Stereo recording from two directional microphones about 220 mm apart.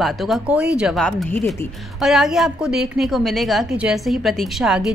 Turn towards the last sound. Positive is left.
turn(degrees=0)  # may be behind; listen again after turning